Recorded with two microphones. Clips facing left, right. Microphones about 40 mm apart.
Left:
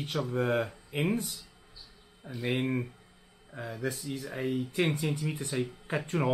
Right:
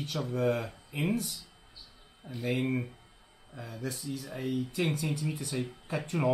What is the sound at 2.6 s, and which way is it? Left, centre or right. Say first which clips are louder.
Speech: even; centre.